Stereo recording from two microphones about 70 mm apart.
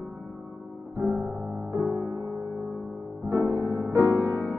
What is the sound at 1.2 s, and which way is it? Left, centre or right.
Music, right.